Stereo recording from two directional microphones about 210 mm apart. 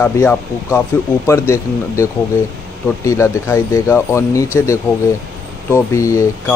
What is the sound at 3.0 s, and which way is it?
Speech, 15° left (ahead or behind).